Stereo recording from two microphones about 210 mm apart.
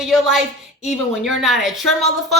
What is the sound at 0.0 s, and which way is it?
A woman's voice, centre (ahead or behind).